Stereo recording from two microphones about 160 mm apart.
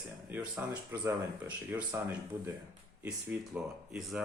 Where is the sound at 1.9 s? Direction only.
15° right (ahead or behind).